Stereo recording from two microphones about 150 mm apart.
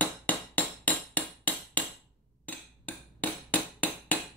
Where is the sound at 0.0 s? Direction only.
10° left (ahead or behind).